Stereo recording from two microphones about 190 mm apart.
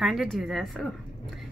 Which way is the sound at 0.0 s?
Centre (ahead or behind).